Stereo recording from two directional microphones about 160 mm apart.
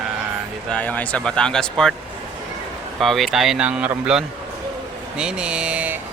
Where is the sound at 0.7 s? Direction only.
10° left (ahead or behind).